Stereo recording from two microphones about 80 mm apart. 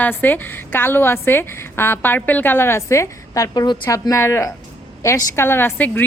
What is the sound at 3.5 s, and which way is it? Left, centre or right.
Speech, left.